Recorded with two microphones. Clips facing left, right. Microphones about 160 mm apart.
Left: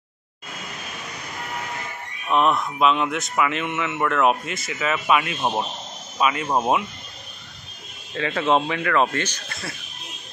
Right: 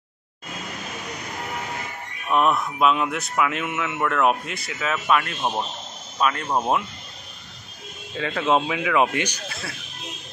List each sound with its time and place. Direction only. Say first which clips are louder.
2.2 s speech: left 1 dB; 5° right (ahead or behind)
8.1 s speech: left 1 dB; centre (ahead or behind)
9.5 s speech: even; centre (ahead or behind)